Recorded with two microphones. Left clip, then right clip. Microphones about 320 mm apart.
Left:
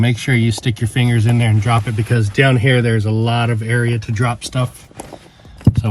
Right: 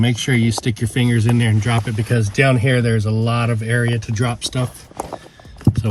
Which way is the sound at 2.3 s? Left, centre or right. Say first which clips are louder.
Left 2 dB; centre.